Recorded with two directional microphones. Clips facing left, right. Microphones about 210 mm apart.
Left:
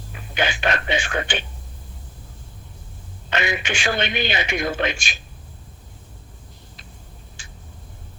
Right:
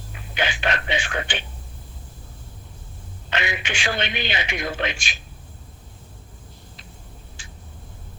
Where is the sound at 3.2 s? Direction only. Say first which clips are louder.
Left 3 dB; 45° left (ahead or behind).